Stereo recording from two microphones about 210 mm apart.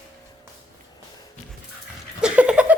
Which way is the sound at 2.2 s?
5° right (ahead or behind).